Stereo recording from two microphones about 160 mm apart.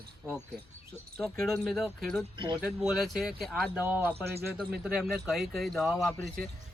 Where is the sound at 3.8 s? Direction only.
10° right (ahead or behind).